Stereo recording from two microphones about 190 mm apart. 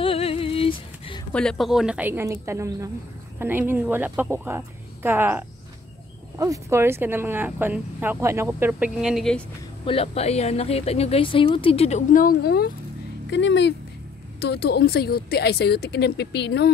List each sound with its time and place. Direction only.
0.0 s a sound: 30° left (ahead or behind)
1.3 s speech: 5° left (ahead or behind)
9.8 s a woman's voice: 30° left (ahead or behind); by 12.7 s 55° left (ahead or behind)
13.3 s speech: 70° left (ahead or behind)
14.4 s a woman's voice: 60° left (ahead or behind)